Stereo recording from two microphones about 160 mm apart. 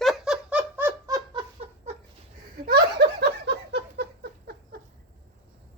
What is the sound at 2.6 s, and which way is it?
Laughter, 80° right.